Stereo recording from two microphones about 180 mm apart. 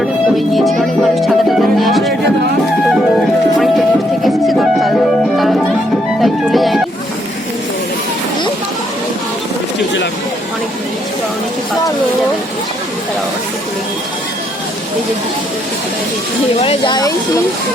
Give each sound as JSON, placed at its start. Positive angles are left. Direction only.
{"t": 0.0, "sound": "music", "side_deg": 0}
{"t": 16.6, "sound": "speech", "side_deg": 30}